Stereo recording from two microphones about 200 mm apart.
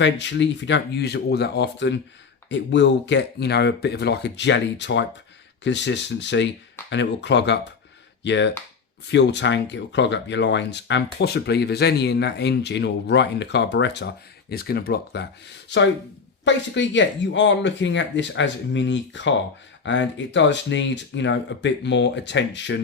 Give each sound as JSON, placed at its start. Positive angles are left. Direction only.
{"t": 0.0, "sound": "speech", "side_deg": 65}